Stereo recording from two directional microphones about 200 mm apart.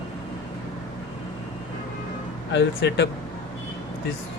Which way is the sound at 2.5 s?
60° left (ahead or behind).